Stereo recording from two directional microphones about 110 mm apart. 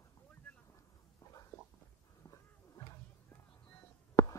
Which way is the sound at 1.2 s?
30° left (ahead or behind).